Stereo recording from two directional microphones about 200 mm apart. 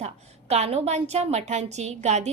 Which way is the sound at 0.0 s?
30° right (ahead or behind).